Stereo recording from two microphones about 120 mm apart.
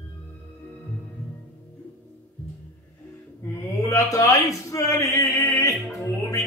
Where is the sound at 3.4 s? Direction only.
25° left (ahead or behind).